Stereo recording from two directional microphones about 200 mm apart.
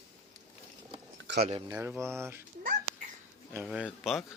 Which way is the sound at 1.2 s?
60° right (ahead or behind).